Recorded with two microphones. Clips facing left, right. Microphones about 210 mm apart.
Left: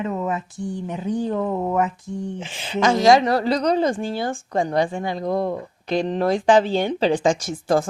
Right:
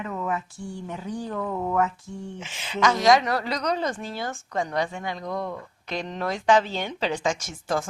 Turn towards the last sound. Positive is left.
turn(degrees=35)  # may be behind; listen again after turning